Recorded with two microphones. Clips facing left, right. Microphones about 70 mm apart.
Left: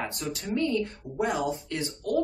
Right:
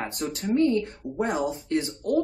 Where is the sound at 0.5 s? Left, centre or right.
Right.